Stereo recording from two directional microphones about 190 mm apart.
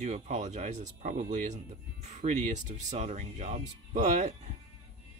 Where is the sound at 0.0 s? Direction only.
35° right (ahead or behind).